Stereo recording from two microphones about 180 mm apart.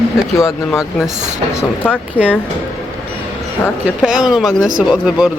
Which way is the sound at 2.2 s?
10° right (ahead or behind).